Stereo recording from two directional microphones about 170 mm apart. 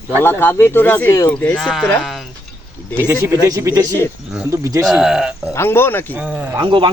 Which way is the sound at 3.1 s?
20° right (ahead or behind).